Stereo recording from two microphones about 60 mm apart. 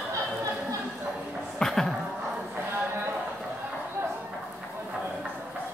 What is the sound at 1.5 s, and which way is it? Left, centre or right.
Music, centre.